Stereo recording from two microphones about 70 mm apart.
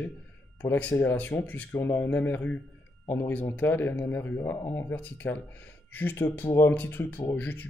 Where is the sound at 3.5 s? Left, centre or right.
Left.